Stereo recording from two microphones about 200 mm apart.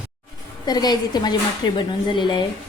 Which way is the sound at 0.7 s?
20° left (ahead or behind).